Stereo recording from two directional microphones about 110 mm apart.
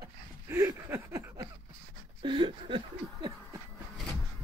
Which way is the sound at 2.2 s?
45° right (ahead or behind).